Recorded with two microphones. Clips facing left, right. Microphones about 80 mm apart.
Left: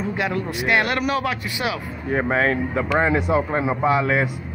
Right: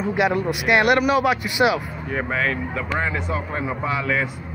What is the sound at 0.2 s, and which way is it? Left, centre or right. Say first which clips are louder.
A man's voice: right 5 dB; centre.